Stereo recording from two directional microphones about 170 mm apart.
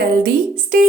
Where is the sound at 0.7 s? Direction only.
55° right (ahead or behind).